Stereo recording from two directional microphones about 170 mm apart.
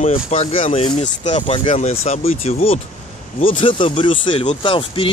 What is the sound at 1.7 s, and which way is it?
Speech, 40° left (ahead or behind).